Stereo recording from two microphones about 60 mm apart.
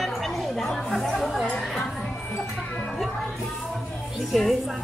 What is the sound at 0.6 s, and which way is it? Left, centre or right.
Chatter, centre.